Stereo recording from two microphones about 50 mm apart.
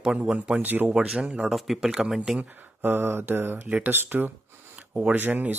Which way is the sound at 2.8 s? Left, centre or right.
Right.